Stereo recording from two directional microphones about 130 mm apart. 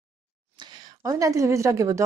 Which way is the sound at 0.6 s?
35° right (ahead or behind).